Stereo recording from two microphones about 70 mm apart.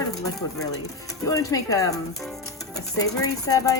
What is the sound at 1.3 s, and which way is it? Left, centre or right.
Speech, left.